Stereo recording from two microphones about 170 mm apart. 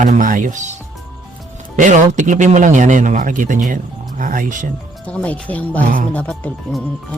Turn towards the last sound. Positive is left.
turn(degrees=10)  # may be behind; listen again after turning